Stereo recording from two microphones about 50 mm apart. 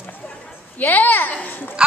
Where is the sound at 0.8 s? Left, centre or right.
Left.